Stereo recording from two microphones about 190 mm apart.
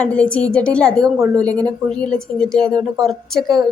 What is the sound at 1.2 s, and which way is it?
Speech, 20° right (ahead or behind).